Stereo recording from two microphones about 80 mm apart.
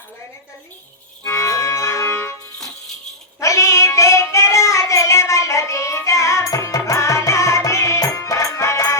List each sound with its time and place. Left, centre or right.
1.2 s music: left
3.4 s child singing: left